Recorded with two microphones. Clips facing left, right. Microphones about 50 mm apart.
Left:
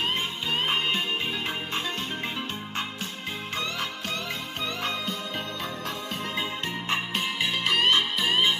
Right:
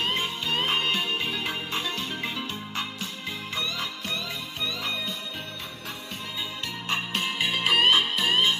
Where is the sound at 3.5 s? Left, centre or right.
Left.